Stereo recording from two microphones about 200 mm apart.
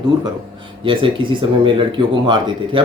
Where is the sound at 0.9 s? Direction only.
25° right (ahead or behind).